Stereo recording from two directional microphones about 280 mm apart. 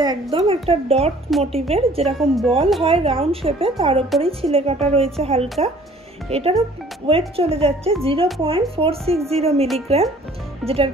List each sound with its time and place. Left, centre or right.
0.0 s speech: centre
2.1 s speech: centre
2.8 s speech: centre
10.6 s speech: centre